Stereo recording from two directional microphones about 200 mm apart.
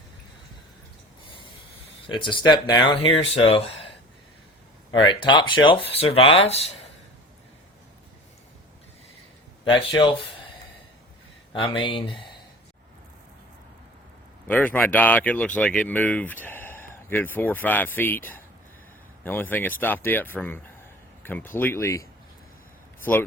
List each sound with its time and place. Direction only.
2.1 s speech: 25° left (ahead or behind)
5.0 s speech: 25° left (ahead or behind)
9.7 s speech: 25° left (ahead or behind)
11.5 s speech: 25° left (ahead or behind)
14.4 s speech: 10° left (ahead or behind)